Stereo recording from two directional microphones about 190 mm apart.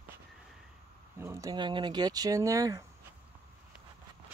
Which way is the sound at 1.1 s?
15° right (ahead or behind).